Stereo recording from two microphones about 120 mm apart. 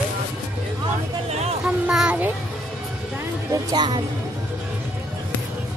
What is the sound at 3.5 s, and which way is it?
Music, 30° right (ahead or behind).